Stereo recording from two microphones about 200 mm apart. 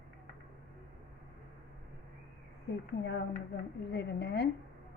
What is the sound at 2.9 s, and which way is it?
A woman's voice, 55° left (ahead or behind).